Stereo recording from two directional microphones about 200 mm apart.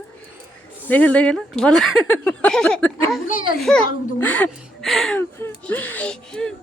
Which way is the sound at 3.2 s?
45° left (ahead or behind).